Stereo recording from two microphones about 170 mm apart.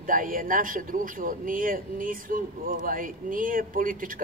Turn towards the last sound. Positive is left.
turn(degrees=-55)  # may be behind; listen again after turning